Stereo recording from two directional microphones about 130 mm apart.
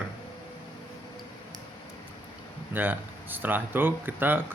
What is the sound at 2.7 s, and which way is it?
Speech, 15° right (ahead or behind).